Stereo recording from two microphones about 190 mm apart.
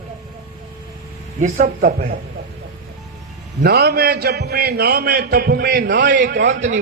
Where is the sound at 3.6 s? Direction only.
55° right (ahead or behind).